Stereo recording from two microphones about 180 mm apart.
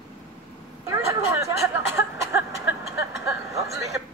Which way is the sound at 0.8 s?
15° right (ahead or behind).